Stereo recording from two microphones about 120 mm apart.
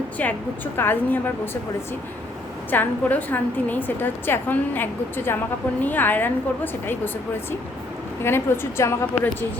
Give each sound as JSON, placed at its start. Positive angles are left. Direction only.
{"t": 0.2, "sound": "a woman's voice", "side_deg": 15}
{"t": 2.6, "sound": "a woman's voice", "side_deg": 15}
{"t": 8.2, "sound": "a woman's voice", "side_deg": 20}